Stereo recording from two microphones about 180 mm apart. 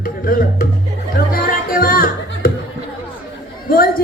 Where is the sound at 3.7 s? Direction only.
55° left (ahead or behind).